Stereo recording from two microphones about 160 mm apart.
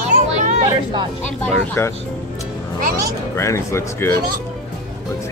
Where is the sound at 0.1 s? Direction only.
50° right (ahead or behind).